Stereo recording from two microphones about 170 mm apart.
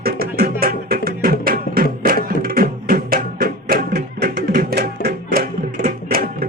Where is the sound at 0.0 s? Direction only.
65° right (ahead or behind).